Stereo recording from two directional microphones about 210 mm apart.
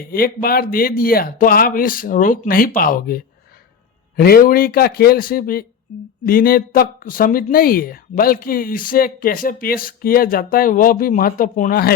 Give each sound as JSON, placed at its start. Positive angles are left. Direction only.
{"t": 0.0, "sound": "speech", "side_deg": 45}
{"t": 4.2, "sound": "speech", "side_deg": 45}